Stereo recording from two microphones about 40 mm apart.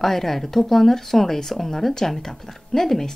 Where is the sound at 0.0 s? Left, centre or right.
Centre.